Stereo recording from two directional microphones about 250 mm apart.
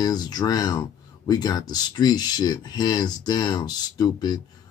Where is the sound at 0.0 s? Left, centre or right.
Centre.